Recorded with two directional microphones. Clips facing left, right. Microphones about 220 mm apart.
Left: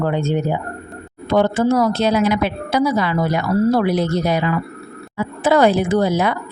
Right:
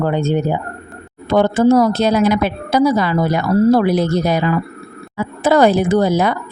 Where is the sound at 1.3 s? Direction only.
40° right (ahead or behind).